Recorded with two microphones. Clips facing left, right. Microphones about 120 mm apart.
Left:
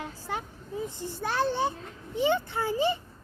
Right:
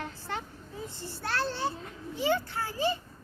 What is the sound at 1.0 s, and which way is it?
Speech, 15° left (ahead or behind).